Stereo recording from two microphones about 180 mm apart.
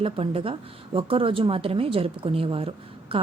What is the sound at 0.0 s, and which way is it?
A woman's voice, 30° right (ahead or behind).